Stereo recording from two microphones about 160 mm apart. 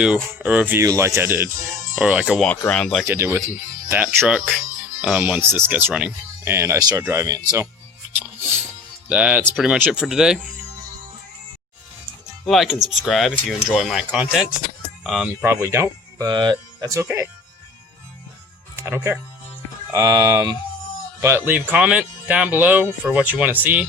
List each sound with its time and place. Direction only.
0.0 s speech: 10° right (ahead or behind)
2.6 s speech: 5° left (ahead or behind)
3.1 s speech: 15° right (ahead or behind)
9.0 s speech: 10° right (ahead or behind)
12.5 s speech: centre (ahead or behind)
15.4 s speech: 15° right (ahead or behind)
18.8 s speech: 15° right (ahead or behind)